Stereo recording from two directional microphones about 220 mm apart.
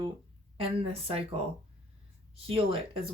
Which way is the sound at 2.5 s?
25° right (ahead or behind).